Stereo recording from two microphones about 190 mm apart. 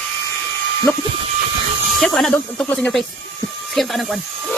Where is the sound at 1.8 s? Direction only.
Centre (ahead or behind).